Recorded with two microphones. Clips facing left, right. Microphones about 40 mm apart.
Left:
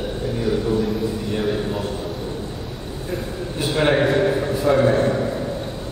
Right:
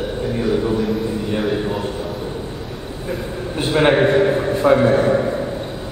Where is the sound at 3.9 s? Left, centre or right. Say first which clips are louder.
Right 3 dB; centre.